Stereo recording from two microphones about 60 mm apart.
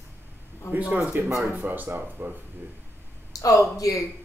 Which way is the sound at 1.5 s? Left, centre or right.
Right.